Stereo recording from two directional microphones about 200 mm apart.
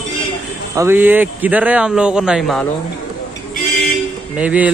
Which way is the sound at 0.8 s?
10° right (ahead or behind).